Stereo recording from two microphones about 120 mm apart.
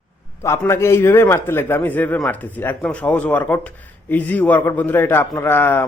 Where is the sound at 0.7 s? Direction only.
20° left (ahead or behind).